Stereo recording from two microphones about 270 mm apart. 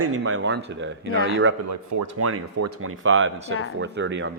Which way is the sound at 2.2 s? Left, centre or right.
Right.